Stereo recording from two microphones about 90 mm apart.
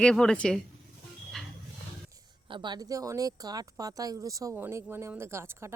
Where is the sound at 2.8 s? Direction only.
40° right (ahead or behind).